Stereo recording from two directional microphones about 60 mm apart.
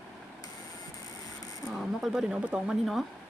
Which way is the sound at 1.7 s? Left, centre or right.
Centre.